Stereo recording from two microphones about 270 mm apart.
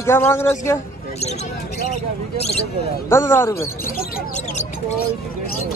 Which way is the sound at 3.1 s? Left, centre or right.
Centre.